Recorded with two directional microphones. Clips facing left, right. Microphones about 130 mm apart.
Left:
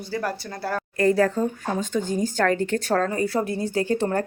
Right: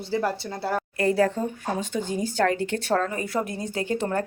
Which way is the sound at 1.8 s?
45° left (ahead or behind).